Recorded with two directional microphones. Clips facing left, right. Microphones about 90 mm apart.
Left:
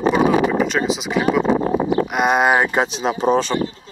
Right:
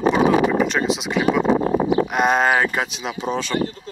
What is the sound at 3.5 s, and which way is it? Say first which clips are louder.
Speech: even; 45° right (ahead or behind).